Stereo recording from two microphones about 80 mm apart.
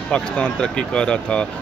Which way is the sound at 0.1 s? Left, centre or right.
Centre.